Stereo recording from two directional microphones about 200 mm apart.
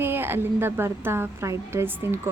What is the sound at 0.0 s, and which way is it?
A woman's voice, 10° right (ahead or behind).